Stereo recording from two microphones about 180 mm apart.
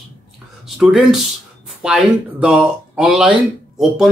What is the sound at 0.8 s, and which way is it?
Speech, 5° right (ahead or behind).